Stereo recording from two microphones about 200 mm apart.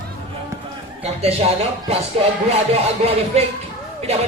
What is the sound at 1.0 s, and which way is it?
Speech, 30° right (ahead or behind).